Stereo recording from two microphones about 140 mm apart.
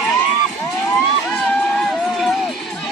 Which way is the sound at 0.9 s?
15° left (ahead or behind).